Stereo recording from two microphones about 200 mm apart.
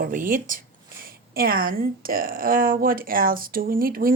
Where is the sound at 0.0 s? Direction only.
45° right (ahead or behind).